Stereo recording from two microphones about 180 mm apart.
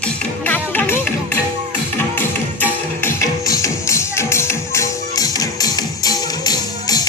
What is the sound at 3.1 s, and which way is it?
Music, 15° left (ahead or behind).